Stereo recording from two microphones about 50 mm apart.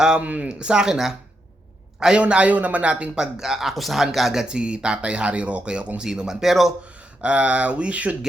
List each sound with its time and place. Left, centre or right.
0.2 s speech: right
0.4 s a man's voice: centre
2.2 s speech: right
3.2 s speech: centre
4.4 s speech: centre
6.1 s speech: centre
7.2 s speech: right